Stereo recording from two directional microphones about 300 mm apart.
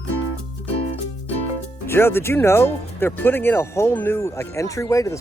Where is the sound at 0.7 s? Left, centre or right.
Centre.